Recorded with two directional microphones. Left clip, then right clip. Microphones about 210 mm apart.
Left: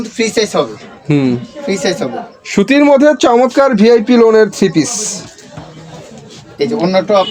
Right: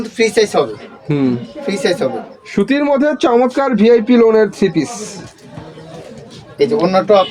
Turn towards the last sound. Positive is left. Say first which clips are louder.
# even
turn(degrees=0)  # may be behind; listen again after turning